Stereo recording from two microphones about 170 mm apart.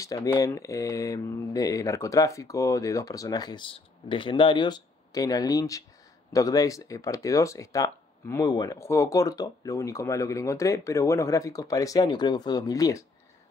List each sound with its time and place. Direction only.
0.0 s speech: 20° left (ahead or behind)